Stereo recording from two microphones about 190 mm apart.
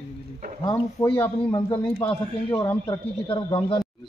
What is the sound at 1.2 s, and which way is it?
Speech, 20° left (ahead or behind).